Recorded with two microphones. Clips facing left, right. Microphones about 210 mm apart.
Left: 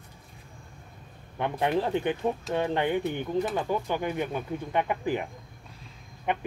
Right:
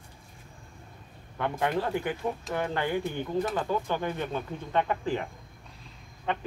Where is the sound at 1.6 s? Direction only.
20° left (ahead or behind).